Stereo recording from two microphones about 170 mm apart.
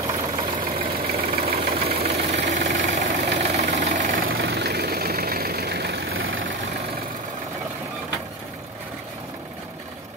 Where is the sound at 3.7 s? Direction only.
45° right (ahead or behind).